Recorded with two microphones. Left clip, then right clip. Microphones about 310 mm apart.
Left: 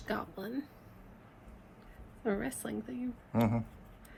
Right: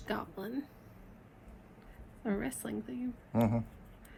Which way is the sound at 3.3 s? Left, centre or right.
Left.